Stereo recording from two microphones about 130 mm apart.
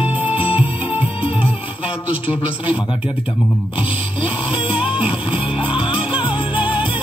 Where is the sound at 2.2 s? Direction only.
45° left (ahead or behind).